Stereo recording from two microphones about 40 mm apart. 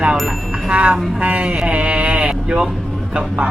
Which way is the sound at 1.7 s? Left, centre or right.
Right.